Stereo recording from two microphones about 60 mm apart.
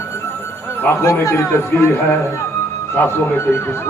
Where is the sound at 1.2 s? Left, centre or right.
Left.